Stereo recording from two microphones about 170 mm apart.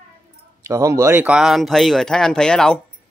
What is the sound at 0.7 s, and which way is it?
Speech, 20° right (ahead or behind).